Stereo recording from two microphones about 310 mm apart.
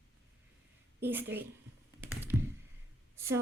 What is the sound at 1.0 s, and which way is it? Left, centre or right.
Speech, centre.